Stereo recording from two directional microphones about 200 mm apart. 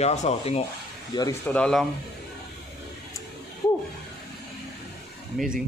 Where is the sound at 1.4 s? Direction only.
5° left (ahead or behind).